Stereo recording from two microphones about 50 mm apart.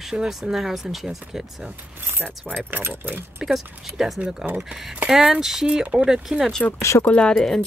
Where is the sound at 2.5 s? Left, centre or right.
Right.